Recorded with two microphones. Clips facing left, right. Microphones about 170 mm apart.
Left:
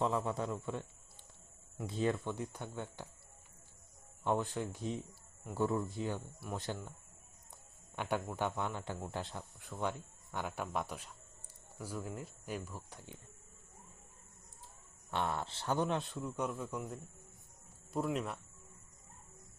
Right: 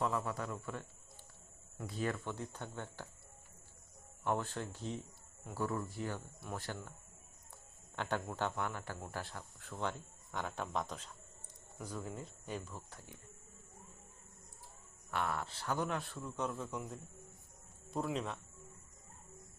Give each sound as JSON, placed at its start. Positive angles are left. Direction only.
{"t": 0.0, "sound": "a man's voice", "side_deg": 20}
{"t": 1.9, "sound": "speech", "side_deg": 20}
{"t": 4.2, "sound": "a man's voice", "side_deg": 15}
{"t": 15.1, "sound": "a man's voice", "side_deg": 25}